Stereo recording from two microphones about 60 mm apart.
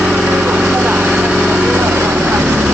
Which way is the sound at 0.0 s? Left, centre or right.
Centre.